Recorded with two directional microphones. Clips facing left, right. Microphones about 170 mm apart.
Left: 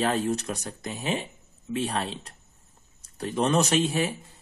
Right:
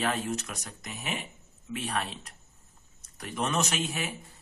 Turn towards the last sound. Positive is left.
turn(degrees=35)  # may be behind; listen again after turning